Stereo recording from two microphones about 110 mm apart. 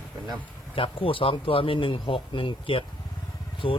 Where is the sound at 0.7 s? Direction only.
55° left (ahead or behind).